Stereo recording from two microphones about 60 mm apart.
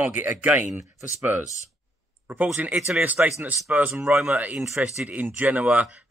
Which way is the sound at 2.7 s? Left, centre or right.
Centre.